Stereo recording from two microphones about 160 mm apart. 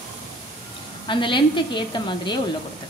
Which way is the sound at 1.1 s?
30° left (ahead or behind).